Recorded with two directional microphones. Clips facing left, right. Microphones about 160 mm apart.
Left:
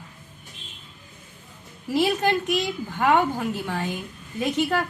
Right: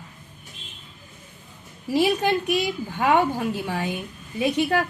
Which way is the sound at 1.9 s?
15° right (ahead or behind).